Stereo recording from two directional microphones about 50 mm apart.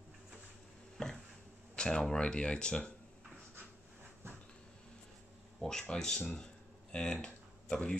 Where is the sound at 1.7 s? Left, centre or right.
Centre.